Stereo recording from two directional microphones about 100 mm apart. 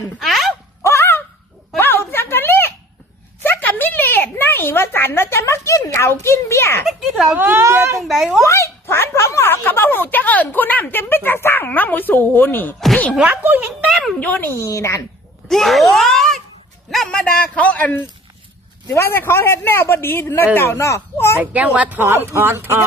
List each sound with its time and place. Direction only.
0.2 s a sound: centre (ahead or behind)
0.9 s a sound: 25° left (ahead or behind)
6.8 s speech: centre (ahead or behind)
7.3 s speech: 20° right (ahead or behind)
8.0 s speech: centre (ahead or behind)
8.4 s a sound: 30° left (ahead or behind)
13.1 s speech: 15° right (ahead or behind)
13.9 s a sound: centre (ahead or behind)
14.2 s speech: 15° left (ahead or behind)
14.6 s a man's voice: 30° left (ahead or behind)
15.4 s groan: centre (ahead or behind)
16.9 s a man's voice: 5° left (ahead or behind); by 21.3 s 30° left (ahead or behind)
21.3 s speech: 15° right (ahead or behind)